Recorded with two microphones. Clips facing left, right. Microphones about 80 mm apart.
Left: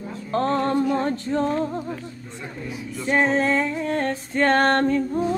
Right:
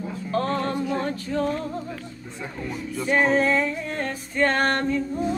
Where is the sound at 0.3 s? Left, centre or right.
Left.